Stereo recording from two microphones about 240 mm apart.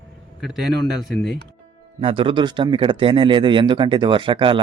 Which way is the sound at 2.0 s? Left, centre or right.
Right.